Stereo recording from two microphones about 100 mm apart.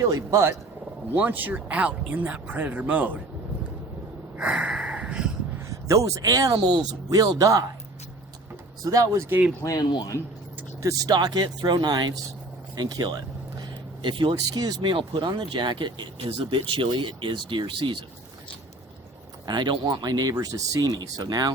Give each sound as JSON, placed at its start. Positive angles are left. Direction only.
{"t": 0.0, "sound": "speech", "side_deg": -35}
{"t": 1.1, "sound": "speech", "side_deg": -15}
{"t": 4.4, "sound": "sniff", "side_deg": -10}
{"t": 5.9, "sound": "speech", "side_deg": -35}
{"t": 8.8, "sound": "speech", "side_deg": -35}
{"t": 9.6, "sound": "speech", "side_deg": 40}
{"t": 10.8, "sound": "speech", "side_deg": -35}
{"t": 13.6, "sound": "speech", "side_deg": -55}
{"t": 19.5, "sound": "speech", "side_deg": -50}